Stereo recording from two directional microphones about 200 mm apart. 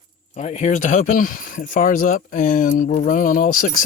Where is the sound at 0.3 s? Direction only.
35° left (ahead or behind).